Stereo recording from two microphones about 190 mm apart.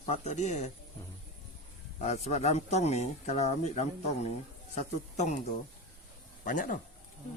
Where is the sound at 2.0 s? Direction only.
35° left (ahead or behind).